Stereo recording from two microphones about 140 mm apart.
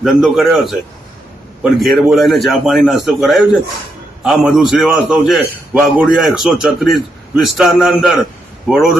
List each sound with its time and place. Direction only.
0.0 s a man's voice: centre (ahead or behind)
1.8 s a man's voice: centre (ahead or behind)